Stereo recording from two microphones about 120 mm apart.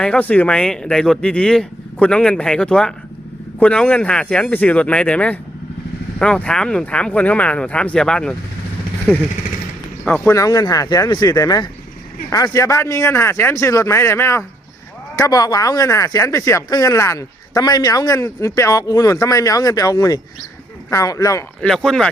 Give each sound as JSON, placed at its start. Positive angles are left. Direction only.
{"t": 0.0, "sound": "speech", "side_deg": 10}
{"t": 10.3, "sound": "speech", "side_deg": 30}
{"t": 15.2, "sound": "speech", "side_deg": 30}
{"t": 21.6, "sound": "speech", "side_deg": 5}